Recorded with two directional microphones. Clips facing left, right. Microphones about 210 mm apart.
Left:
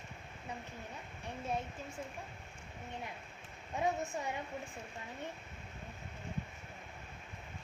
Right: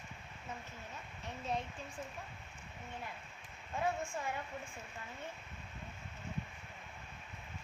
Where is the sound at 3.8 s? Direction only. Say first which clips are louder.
Left 2 dB; 20° left (ahead or behind).